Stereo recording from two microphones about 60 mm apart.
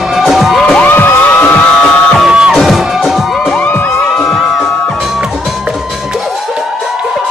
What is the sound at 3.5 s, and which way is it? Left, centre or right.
Music, left.